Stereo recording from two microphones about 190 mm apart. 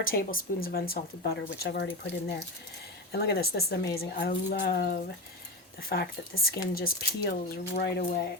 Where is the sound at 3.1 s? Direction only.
55° left (ahead or behind).